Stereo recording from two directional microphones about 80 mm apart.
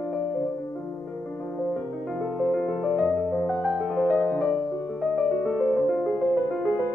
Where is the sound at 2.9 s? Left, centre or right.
Left.